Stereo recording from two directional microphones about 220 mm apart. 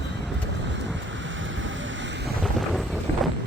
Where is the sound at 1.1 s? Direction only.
60° right (ahead or behind).